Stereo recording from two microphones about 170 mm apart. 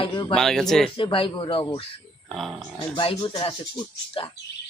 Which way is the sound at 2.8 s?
30° left (ahead or behind).